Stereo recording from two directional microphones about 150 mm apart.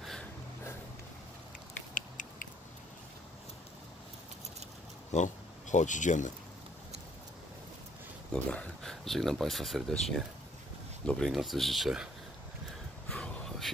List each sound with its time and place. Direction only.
5.1 s speech: 55° left (ahead or behind)
8.3 s speech: 5° left (ahead or behind)
13.1 s a sound: 5° left (ahead or behind)